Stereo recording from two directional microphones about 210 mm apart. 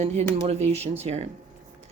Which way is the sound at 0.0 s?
35° right (ahead or behind).